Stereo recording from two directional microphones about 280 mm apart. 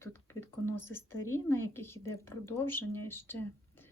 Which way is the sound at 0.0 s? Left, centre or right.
Centre.